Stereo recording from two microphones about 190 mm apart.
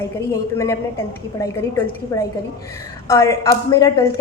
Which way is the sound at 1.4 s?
15° left (ahead or behind).